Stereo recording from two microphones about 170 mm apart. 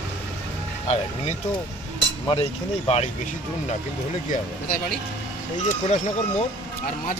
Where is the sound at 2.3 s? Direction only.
35° left (ahead or behind).